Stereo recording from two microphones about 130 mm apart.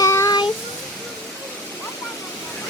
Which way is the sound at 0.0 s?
25° left (ahead or behind).